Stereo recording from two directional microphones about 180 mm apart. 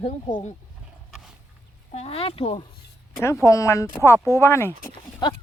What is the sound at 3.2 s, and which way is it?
Speech, 15° left (ahead or behind).